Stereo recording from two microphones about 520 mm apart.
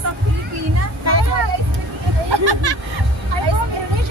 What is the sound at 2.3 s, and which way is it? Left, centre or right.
Speech, right.